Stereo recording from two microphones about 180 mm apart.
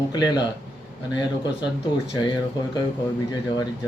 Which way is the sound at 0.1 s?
25° left (ahead or behind).